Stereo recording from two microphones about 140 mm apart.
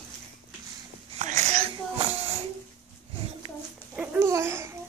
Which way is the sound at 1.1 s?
55° right (ahead or behind).